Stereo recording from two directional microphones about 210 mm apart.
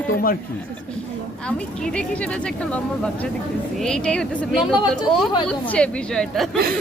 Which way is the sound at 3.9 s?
5° left (ahead or behind).